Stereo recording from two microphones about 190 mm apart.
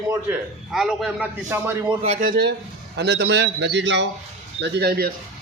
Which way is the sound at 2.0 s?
35° right (ahead or behind).